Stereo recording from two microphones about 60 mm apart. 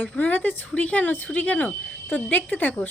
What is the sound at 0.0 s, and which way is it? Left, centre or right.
Speech, left.